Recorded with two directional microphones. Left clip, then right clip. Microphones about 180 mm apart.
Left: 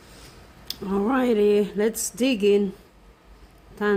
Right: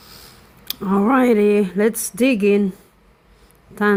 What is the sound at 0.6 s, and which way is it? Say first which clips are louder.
Speech: right 6 dB; 35° right (ahead or behind).